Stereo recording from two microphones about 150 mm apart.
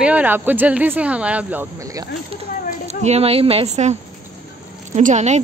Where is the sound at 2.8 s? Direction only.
45° right (ahead or behind).